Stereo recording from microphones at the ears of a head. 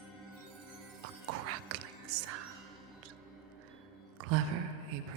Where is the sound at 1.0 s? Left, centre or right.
Right.